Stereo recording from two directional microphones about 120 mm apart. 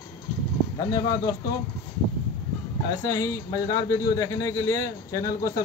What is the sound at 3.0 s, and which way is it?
A man's voice, 30° left (ahead or behind).